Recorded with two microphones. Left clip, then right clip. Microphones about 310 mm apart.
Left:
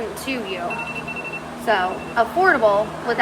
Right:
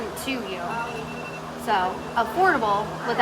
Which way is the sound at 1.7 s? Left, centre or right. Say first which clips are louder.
Left 3 dB; centre.